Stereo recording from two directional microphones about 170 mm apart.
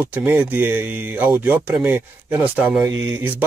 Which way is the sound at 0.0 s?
10° right (ahead or behind).